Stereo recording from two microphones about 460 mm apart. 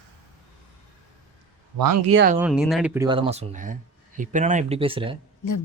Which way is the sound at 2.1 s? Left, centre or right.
Right.